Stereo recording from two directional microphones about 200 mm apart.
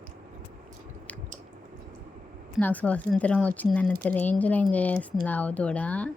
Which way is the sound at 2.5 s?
10° left (ahead or behind).